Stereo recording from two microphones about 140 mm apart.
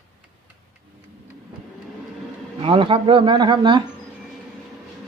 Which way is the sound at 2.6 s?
40° right (ahead or behind).